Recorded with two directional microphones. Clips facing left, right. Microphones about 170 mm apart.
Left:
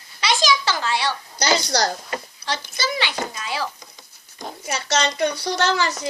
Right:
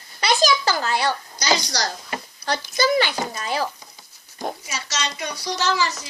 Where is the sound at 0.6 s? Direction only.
40° right (ahead or behind).